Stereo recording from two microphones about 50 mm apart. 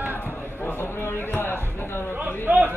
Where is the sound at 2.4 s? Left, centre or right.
Right.